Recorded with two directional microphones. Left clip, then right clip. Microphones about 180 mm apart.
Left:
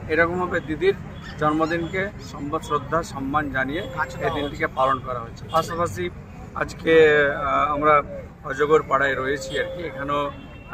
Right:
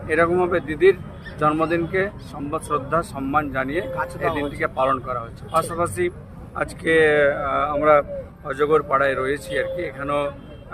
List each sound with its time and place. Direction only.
0.1 s speech: 35° right (ahead or behind)